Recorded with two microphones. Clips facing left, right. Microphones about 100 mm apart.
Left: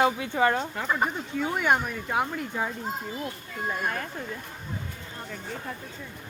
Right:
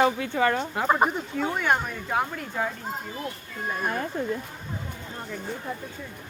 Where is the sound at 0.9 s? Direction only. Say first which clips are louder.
Right 6 dB; 45° right (ahead or behind).